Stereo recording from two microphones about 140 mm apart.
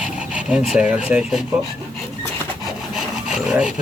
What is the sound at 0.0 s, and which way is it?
Speech, 5° right (ahead or behind).